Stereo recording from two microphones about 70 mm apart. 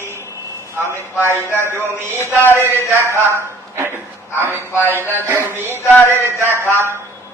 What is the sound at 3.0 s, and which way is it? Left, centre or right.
A man's voice, right.